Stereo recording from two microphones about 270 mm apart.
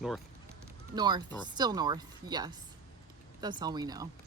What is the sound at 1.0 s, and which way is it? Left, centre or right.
Speech, centre.